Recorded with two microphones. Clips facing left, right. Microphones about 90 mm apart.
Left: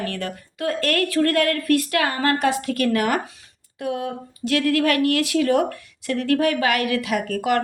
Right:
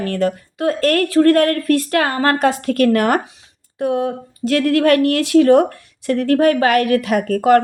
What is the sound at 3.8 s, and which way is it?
Speech, 35° right (ahead or behind).